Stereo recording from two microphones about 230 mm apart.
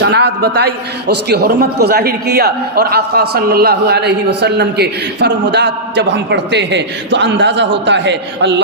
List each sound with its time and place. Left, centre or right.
0.0 s a man's voice: right